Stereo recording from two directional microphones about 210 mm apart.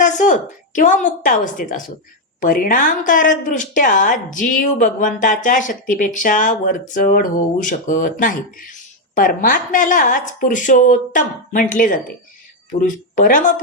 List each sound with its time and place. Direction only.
0.0 s speech: 35° left (ahead or behind)